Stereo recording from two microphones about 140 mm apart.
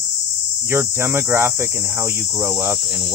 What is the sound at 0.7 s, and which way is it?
Cricket, 15° right (ahead or behind).